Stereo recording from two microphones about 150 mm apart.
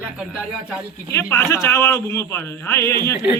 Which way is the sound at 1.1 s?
15° left (ahead or behind).